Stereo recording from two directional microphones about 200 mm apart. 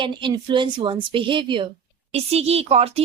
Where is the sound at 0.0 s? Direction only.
25° right (ahead or behind).